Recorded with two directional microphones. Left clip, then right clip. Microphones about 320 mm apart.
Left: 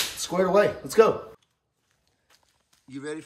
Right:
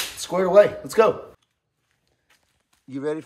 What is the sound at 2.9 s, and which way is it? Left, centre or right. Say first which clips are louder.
Speech: right 8 dB; centre.